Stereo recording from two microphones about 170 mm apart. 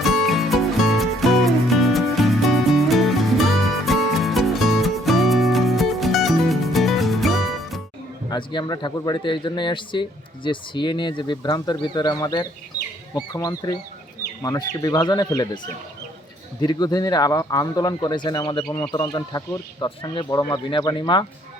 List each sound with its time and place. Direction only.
0.0 s music: centre (ahead or behind)
8.3 s a man's voice: 30° left (ahead or behind)
18.7 s speech: 10° left (ahead or behind)
18.9 s a man's voice: 20° left (ahead or behind)